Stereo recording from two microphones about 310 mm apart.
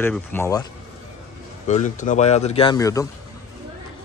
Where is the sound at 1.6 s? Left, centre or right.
Left.